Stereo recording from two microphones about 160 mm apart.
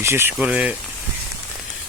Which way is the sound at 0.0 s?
15° right (ahead or behind).